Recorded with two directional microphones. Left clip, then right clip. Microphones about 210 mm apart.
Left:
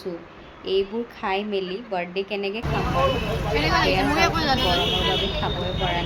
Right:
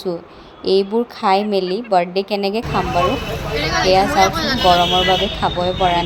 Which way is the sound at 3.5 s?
25° left (ahead or behind).